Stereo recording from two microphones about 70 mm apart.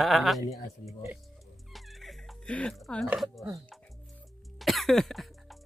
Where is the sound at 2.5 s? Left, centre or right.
Centre.